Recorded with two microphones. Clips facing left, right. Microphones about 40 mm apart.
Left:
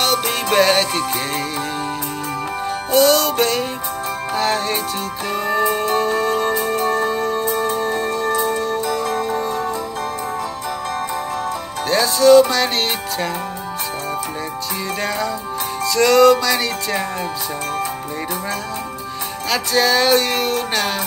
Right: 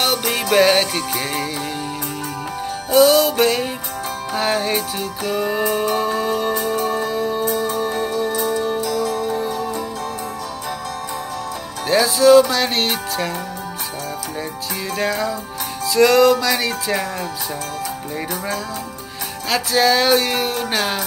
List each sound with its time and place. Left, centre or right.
0.3 s music: centre
2.9 s music: centre
7.4 s music: left
7.8 s music: centre
8.4 s music: left
8.8 s music: left
9.5 s music: left
11.9 s music: centre
15.0 s music: centre
19.5 s music: centre